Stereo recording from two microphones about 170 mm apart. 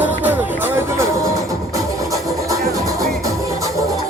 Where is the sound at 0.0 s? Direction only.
10° right (ahead or behind).